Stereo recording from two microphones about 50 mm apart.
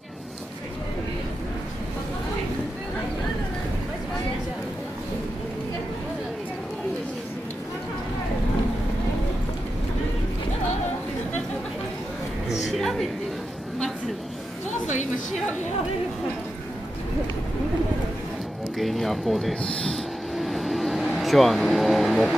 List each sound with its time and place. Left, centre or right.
12.4 s a sound: centre
18.8 s speech: centre
19.6 s speech: left
20.3 s vehicle: centre